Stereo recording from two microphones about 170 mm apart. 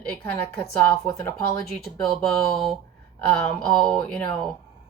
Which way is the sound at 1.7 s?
Centre (ahead or behind).